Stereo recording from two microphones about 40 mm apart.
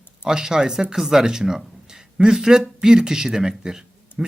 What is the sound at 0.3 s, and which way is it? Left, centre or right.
Speech, centre.